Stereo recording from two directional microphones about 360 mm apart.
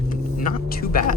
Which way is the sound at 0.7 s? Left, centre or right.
Left.